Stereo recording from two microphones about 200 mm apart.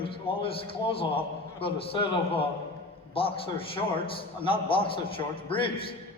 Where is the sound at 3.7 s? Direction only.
25° left (ahead or behind).